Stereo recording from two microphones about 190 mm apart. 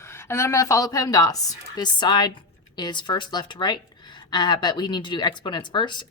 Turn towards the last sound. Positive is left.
turn(degrees=25)  # may be behind; listen again after turning